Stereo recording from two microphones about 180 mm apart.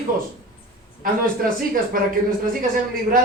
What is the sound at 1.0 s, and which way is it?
A man's voice, 50° right (ahead or behind).